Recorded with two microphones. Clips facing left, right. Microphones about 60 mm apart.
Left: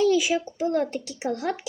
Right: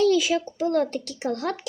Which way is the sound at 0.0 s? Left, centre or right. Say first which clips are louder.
Right 1 dB; centre.